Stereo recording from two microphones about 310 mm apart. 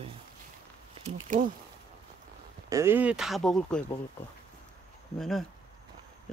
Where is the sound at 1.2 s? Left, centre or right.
Right.